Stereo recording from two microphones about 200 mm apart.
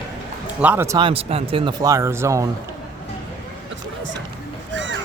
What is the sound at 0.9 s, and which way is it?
Speech, 25° right (ahead or behind).